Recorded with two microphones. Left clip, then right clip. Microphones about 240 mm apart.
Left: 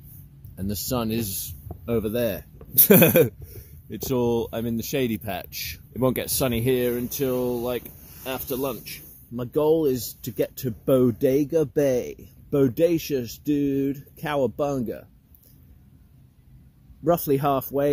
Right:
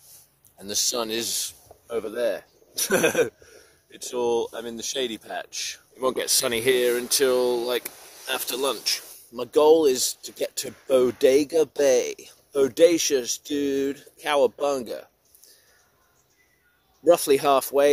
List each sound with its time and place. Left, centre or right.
0.7 s speech: centre
2.0 s speech: left
5.9 s speech: centre
6.2 s speech: centre
9.3 s speech: centre
17.0 s speech: centre